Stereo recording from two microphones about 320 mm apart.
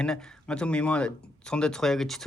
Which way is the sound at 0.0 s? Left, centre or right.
Centre.